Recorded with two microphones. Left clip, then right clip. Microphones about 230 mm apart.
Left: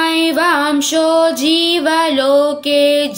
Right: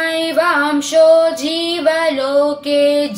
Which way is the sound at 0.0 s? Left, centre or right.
Left.